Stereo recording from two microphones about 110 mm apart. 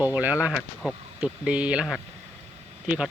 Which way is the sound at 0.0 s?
15° right (ahead or behind).